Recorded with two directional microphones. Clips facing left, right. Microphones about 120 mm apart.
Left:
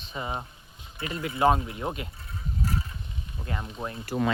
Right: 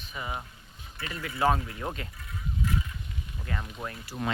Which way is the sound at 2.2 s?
35° left (ahead or behind).